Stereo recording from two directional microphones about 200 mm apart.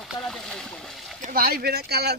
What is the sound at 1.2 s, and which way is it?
Speech, 45° right (ahead or behind).